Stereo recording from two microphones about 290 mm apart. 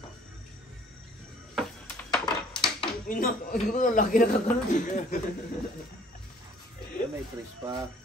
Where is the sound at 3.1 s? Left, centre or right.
Left.